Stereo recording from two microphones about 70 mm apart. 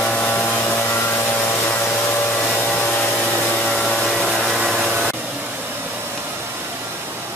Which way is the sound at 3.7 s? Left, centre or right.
Centre.